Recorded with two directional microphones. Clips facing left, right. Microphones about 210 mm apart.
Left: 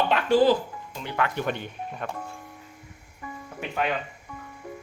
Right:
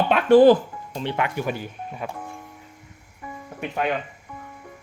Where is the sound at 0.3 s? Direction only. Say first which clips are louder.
Right 8 dB; 55° right (ahead or behind).